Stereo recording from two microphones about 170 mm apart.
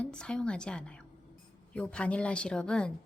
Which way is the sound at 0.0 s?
5° left (ahead or behind).